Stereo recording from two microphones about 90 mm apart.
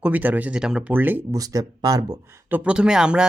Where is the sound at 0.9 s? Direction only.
20° right (ahead or behind).